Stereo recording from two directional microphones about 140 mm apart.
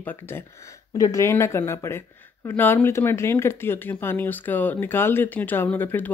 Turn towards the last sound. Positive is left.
turn(degrees=15)  # may be behind; listen again after turning